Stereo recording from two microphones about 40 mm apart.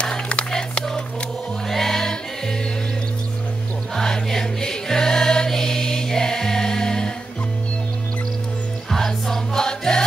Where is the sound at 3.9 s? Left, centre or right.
Centre.